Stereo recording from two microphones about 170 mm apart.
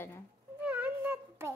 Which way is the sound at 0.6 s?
10° right (ahead or behind).